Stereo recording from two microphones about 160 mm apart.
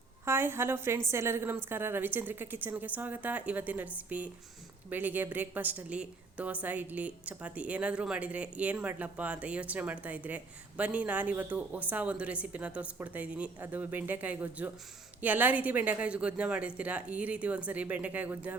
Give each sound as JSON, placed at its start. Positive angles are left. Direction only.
{"t": 0.3, "sound": "a woman's voice", "side_deg": -15}